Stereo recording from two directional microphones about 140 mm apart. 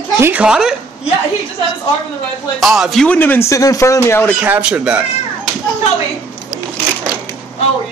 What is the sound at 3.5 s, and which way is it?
Speech, 25° left (ahead or behind).